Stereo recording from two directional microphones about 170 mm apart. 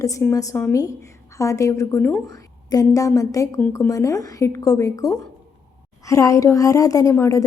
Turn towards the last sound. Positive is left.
turn(degrees=20)  # may be behind; listen again after turning